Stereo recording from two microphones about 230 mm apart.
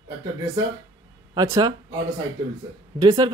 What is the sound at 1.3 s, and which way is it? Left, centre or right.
Speech, centre.